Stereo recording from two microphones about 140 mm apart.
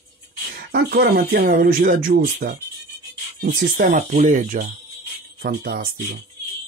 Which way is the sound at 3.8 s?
65° right (ahead or behind).